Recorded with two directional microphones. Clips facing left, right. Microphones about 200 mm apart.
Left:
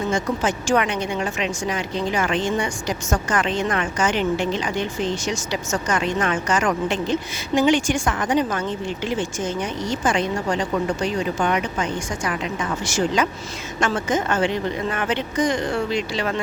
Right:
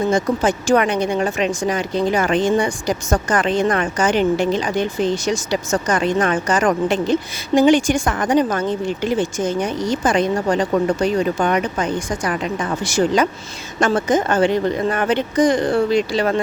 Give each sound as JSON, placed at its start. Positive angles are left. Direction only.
{"t": 0.1, "sound": "speech", "side_deg": -35}
{"t": 13.7, "sound": "speech", "side_deg": -35}